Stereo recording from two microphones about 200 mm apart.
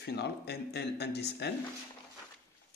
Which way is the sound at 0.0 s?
55° left (ahead or behind).